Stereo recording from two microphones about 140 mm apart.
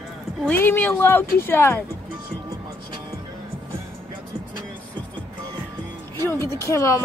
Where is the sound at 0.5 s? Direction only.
15° left (ahead or behind).